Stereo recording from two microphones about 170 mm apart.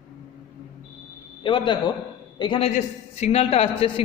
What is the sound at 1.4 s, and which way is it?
A man's voice, 30° left (ahead or behind).